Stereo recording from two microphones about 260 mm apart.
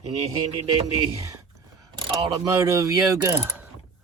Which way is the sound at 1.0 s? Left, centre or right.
Centre.